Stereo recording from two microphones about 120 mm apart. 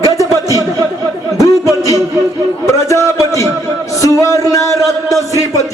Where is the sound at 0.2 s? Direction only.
25° left (ahead or behind).